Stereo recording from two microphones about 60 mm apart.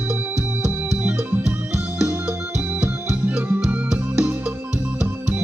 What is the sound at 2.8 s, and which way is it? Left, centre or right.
Music, right.